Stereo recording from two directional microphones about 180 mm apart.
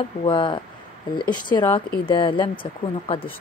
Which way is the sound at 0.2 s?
25° left (ahead or behind).